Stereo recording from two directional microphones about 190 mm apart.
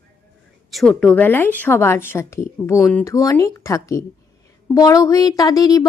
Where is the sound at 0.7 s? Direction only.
Centre (ahead or behind).